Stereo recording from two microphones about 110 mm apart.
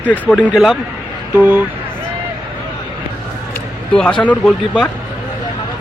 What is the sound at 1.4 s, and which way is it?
Speech, 15° right (ahead or behind).